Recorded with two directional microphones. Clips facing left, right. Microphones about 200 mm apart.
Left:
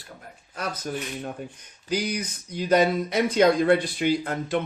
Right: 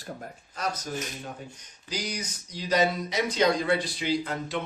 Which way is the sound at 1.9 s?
55° left (ahead or behind).